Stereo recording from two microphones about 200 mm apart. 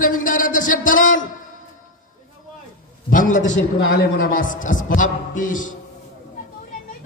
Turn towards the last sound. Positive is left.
turn(degrees=40)  # may be behind; listen again after turning